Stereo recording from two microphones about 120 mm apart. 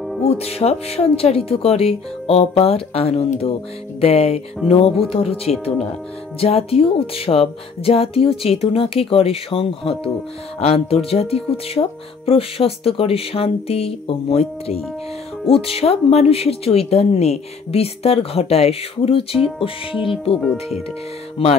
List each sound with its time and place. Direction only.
0.2 s speech: 60° left (ahead or behind)
21.4 s speech: 55° left (ahead or behind)